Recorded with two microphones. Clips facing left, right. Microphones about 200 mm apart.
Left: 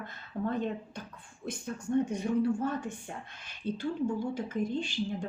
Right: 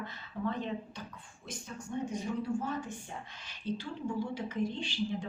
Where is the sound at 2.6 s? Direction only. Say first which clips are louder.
Left 4 dB; 55° left (ahead or behind).